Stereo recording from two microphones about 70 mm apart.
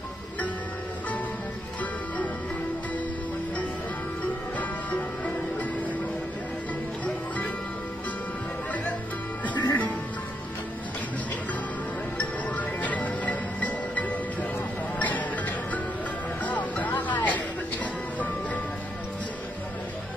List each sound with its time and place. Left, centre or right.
4.6 s music: left
9.4 s music: left
12.2 s music: left